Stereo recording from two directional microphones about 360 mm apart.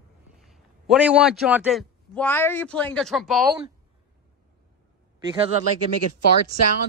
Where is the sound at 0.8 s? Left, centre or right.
Centre.